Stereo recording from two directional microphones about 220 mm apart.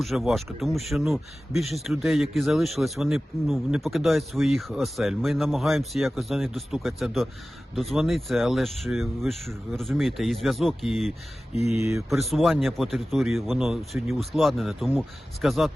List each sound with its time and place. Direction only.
0.0 s speech: centre (ahead or behind)
11.5 s speech: 30° left (ahead or behind)
11.8 s speech: 15° right (ahead or behind)
12.3 s speech: centre (ahead or behind)